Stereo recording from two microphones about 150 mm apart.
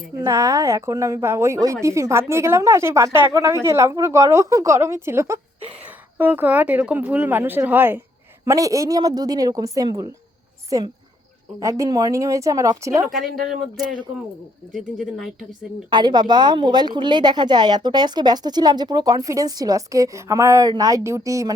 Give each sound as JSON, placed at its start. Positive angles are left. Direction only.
{"t": 0.3, "sound": "speech", "side_deg": -20}
{"t": 13.1, "sound": "speech", "side_deg": 0}
{"t": 14.7, "sound": "speech", "side_deg": 0}
{"t": 15.9, "sound": "speech", "side_deg": -30}